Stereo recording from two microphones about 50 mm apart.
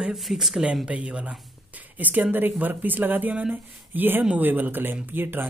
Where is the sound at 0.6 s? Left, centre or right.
Right.